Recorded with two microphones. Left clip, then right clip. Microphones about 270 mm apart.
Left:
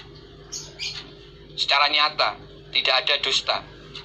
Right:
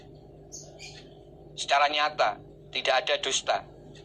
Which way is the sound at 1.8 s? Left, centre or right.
Right.